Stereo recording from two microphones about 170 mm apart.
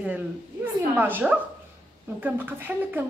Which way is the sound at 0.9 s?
10° right (ahead or behind).